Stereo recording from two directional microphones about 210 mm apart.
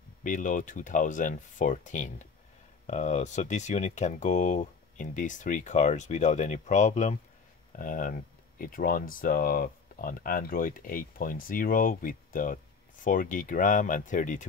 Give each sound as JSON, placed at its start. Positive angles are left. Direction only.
{"t": 0.2, "sound": "speech", "side_deg": 40}